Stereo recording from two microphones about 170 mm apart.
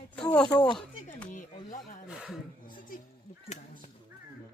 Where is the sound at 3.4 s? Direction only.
40° left (ahead or behind).